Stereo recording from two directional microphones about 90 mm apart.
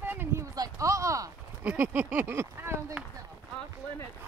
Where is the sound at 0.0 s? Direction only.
20° right (ahead or behind).